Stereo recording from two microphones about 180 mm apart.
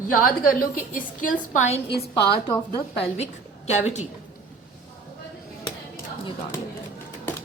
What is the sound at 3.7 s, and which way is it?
Speech, 40° left (ahead or behind).